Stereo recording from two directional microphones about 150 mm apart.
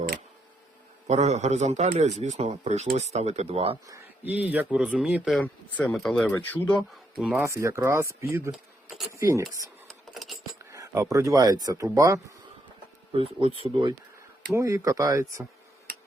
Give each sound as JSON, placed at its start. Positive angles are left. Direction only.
{"t": 1.0, "sound": "a man's voice", "side_deg": -50}
{"t": 3.8, "sound": "speech", "side_deg": -15}
{"t": 5.4, "sound": "speech", "side_deg": 10}
{"t": 7.2, "sound": "speech", "side_deg": -5}
{"t": 7.4, "sound": "speech", "side_deg": -20}
{"t": 10.2, "sound": "a sound", "side_deg": 0}
{"t": 10.6, "sound": "speech", "side_deg": -20}
{"t": 13.1, "sound": "speech", "side_deg": -40}
{"t": 14.5, "sound": "speech", "side_deg": -20}